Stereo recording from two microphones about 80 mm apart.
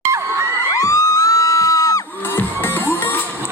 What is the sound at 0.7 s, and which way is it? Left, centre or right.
Music, left.